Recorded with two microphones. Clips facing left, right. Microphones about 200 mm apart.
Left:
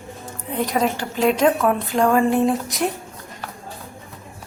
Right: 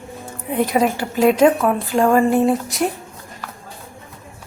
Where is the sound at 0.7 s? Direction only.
10° right (ahead or behind).